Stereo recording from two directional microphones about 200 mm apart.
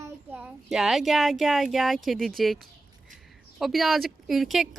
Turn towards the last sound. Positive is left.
turn(degrees=0)  # may be behind; listen again after turning